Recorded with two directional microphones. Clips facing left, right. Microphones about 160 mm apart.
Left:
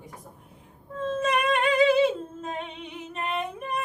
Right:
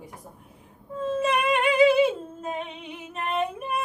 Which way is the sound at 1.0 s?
10° right (ahead or behind).